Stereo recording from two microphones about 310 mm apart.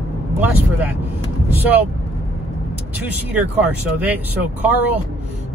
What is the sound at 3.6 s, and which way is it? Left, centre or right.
Speech, centre.